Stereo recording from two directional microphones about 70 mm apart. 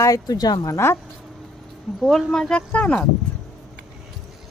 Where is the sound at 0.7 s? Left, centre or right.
Left.